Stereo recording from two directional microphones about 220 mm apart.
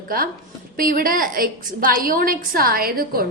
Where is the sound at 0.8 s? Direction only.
40° right (ahead or behind).